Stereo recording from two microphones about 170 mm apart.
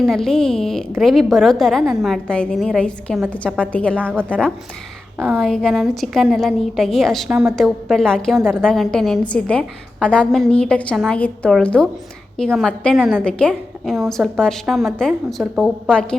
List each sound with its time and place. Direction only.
0.0 s a woman's voice: centre (ahead or behind)
5.1 s a woman's voice: 10° right (ahead or behind)
5.4 s a woman's voice: 5° left (ahead or behind)